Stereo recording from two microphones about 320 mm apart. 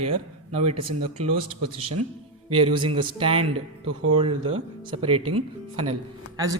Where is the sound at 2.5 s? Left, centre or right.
Centre.